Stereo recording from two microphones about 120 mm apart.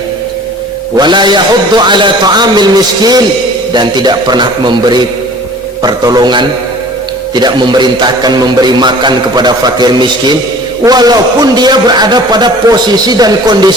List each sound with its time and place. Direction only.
0.9 s a man's voice: 40° right (ahead or behind)